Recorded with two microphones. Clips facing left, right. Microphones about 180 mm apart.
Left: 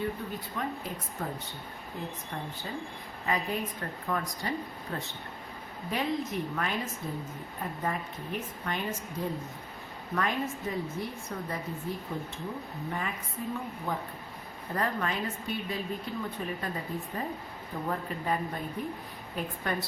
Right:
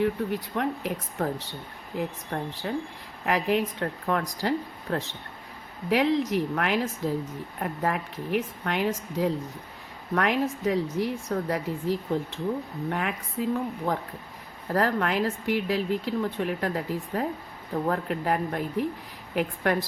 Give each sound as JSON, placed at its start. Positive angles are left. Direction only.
{"t": 0.0, "sound": "speech", "side_deg": -80}
{"t": 10.2, "sound": "speech", "side_deg": -80}